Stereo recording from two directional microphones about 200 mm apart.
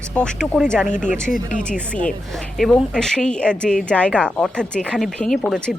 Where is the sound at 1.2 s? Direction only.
40° left (ahead or behind).